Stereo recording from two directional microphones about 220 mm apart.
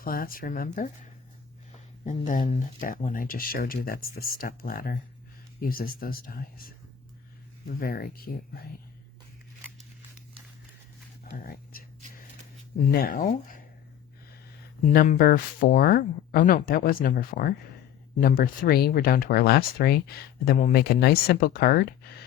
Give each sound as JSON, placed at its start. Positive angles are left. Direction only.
{"t": 0.0, "sound": "speech", "side_deg": 40}
{"t": 2.0, "sound": "speech", "side_deg": 35}
{"t": 2.7, "sound": "speech", "side_deg": 40}
{"t": 7.8, "sound": "speech", "side_deg": 40}
{"t": 11.3, "sound": "whispering", "side_deg": 40}
{"t": 12.9, "sound": "speech", "side_deg": 45}
{"t": 13.2, "sound": "speech", "side_deg": 35}
{"t": 14.9, "sound": "speech", "side_deg": 40}